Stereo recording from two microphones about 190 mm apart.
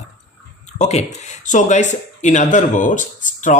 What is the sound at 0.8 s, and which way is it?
Speech, 35° left (ahead or behind).